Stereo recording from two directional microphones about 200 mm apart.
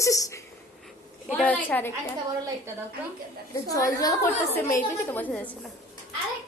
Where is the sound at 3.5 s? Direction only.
15° left (ahead or behind).